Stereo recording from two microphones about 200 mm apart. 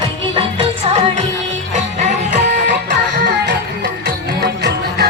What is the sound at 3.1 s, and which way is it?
Music, 60° right (ahead or behind).